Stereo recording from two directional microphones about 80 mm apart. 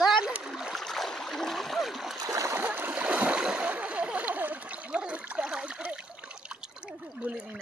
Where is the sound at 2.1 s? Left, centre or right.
Right.